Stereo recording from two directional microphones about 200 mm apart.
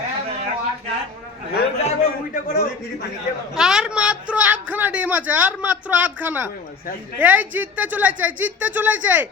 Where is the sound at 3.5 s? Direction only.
5° right (ahead or behind).